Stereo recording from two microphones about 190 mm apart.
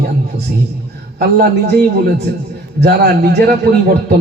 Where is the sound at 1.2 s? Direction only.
55° right (ahead or behind).